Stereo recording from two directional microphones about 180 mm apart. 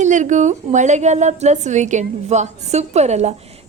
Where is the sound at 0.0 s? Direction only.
45° right (ahead or behind).